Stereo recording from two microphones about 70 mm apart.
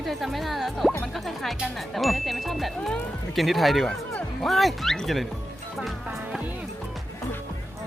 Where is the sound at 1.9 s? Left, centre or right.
Centre.